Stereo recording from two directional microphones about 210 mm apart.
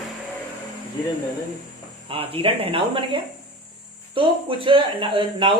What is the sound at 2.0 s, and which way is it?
Speech, 25° right (ahead or behind).